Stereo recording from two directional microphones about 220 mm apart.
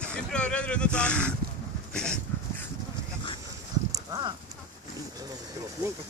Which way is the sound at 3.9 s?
20° right (ahead or behind).